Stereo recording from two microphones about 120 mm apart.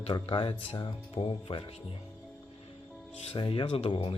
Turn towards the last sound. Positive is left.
turn(degrees=50)  # may be behind; listen again after turning